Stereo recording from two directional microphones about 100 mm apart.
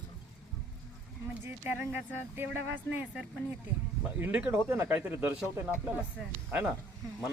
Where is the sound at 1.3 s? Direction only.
20° right (ahead or behind).